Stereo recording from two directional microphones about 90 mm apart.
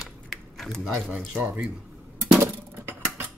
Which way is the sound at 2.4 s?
25° right (ahead or behind).